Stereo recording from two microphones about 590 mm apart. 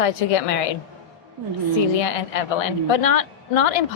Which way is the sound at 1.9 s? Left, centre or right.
Left.